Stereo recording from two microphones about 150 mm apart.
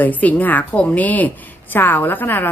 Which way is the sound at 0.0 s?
10° left (ahead or behind).